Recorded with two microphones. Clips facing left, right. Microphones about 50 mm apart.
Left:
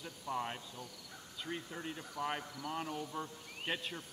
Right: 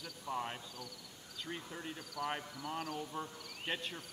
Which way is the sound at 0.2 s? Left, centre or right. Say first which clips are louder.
Left 1 dB; centre.